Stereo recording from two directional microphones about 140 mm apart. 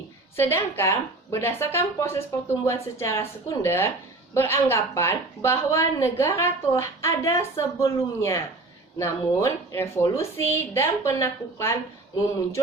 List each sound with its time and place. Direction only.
0.3 s a woman's voice: 15° left (ahead or behind)